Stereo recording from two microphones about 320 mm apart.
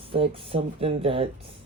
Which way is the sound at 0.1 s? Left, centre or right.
Centre.